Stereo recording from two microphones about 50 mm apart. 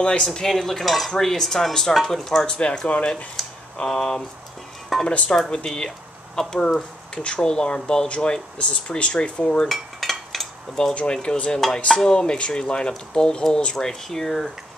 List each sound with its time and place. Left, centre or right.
0.2 s speech: centre
2.4 s speech: centre
3.3 s a sound: centre
4.9 s speech: centre
5.3 s speech: centre
9.7 s cutlery: centre
11.0 s speech: left
13.8 s speech: centre